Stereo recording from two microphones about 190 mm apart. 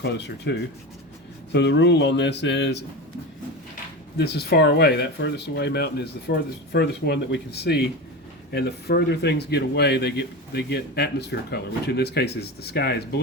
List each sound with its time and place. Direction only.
0.0 s speech: 60° left (ahead or behind)
1.5 s speech: 65° left (ahead or behind)
4.2 s speech: 60° left (ahead or behind)